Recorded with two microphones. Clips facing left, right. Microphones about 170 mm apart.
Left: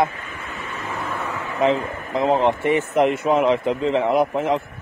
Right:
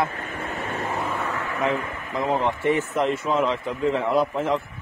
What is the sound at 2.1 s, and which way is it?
A man's voice, 20° left (ahead or behind).